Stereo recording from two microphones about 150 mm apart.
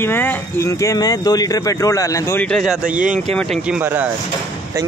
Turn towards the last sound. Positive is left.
turn(degrees=-10)  # may be behind; listen again after turning